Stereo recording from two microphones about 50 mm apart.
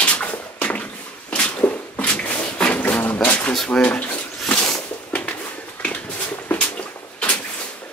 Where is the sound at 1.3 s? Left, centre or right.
Left.